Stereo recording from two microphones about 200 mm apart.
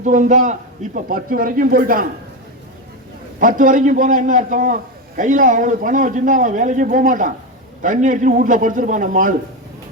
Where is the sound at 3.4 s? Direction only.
40° right (ahead or behind).